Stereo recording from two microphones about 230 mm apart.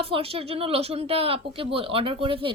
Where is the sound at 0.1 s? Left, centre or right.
Right.